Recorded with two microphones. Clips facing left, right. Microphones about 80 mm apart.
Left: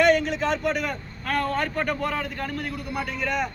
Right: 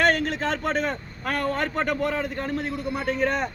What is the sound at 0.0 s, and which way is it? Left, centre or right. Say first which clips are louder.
A man's voice: left 2 dB; right.